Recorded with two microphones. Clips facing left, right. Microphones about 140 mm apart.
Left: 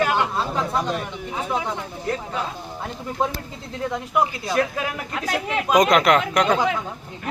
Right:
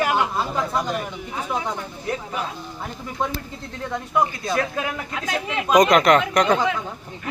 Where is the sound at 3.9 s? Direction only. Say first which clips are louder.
Right 1 dB; 10° left (ahead or behind).